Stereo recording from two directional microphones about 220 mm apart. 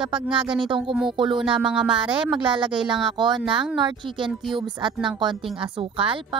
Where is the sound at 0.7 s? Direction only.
20° right (ahead or behind).